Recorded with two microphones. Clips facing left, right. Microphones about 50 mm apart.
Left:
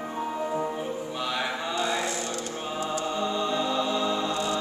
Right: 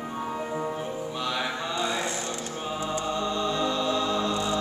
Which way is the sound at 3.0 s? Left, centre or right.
Centre.